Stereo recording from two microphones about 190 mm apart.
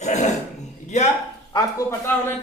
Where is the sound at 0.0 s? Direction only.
40° left (ahead or behind).